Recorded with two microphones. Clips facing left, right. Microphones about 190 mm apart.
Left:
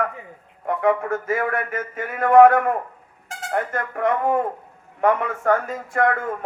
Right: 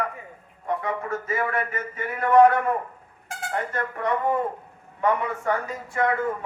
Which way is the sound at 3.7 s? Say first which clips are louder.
Left 3 dB; 50° left (ahead or behind).